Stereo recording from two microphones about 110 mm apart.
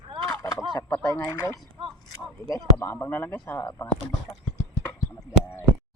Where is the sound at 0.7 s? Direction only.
40° left (ahead or behind).